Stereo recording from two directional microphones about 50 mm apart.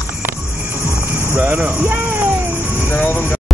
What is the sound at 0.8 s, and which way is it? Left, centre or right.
Music, right.